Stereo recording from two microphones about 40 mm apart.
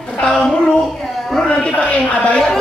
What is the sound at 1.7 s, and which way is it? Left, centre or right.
Speech, left.